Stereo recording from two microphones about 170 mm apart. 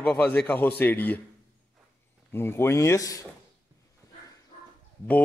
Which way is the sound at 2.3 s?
15° left (ahead or behind).